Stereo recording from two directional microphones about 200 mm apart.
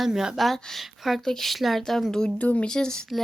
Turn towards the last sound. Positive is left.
turn(degrees=0)  # may be behind; listen again after turning